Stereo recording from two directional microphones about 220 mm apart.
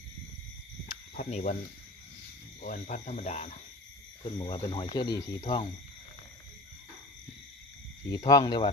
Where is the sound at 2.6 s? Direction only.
35° left (ahead or behind); by 5.3 s 20° left (ahead or behind).